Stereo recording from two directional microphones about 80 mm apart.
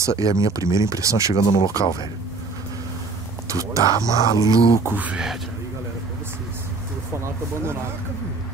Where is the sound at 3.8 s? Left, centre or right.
Left.